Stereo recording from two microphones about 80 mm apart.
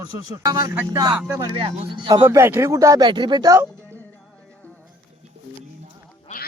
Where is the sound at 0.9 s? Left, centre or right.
Right.